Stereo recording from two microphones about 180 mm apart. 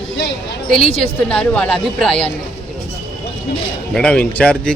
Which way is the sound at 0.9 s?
30° left (ahead or behind).